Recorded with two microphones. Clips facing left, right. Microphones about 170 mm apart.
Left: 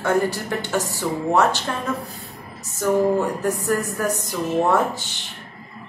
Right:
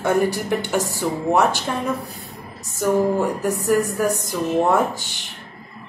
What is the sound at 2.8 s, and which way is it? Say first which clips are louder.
Speech: even; 15° right (ahead or behind).